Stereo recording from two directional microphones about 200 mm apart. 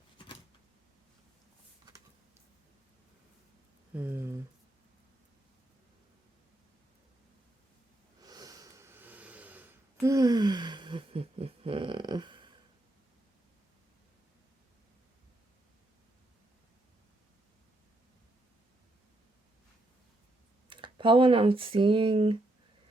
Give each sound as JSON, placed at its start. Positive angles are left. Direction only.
{"t": 3.9, "sound": "a sound", "side_deg": -10}
{"t": 8.2, "sound": "snort", "side_deg": -20}
{"t": 20.7, "sound": "speech", "side_deg": -25}